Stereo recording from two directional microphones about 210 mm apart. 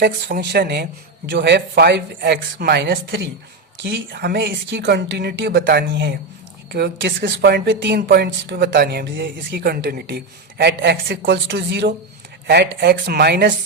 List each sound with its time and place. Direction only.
0.0 s speech: 50° right (ahead or behind)